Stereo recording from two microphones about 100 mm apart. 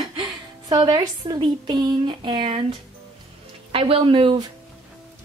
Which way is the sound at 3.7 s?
65° right (ahead or behind).